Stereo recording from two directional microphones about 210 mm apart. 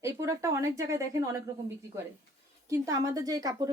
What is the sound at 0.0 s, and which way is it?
A woman's voice, 15° right (ahead or behind).